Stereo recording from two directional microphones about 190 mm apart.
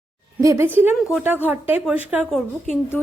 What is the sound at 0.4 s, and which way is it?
A woman's voice, 15° right (ahead or behind).